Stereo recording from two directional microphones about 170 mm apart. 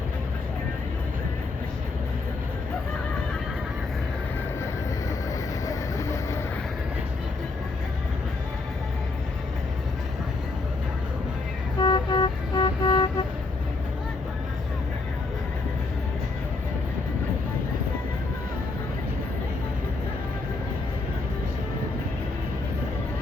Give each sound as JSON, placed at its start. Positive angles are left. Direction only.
{"t": 5.6, "sound": "music", "side_deg": 15}
{"t": 11.8, "sound": "vehicle", "side_deg": 30}